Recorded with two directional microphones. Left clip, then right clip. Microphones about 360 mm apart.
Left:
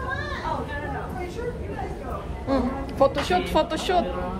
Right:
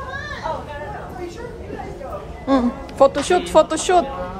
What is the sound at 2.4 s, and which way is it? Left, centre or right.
Speech, centre.